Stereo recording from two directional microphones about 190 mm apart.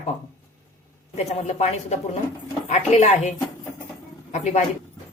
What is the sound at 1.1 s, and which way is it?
Speech, 35° left (ahead or behind).